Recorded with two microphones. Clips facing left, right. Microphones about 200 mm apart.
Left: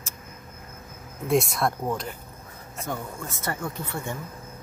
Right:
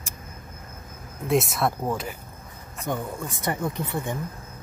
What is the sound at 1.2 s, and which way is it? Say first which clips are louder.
Speech: even; centre (ahead or behind).